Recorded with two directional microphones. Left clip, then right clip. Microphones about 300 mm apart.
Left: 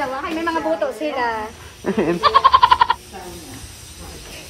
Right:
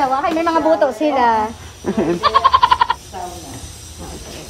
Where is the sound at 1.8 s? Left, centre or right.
Centre.